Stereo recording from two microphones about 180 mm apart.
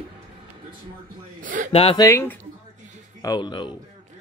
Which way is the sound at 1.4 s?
45° right (ahead or behind).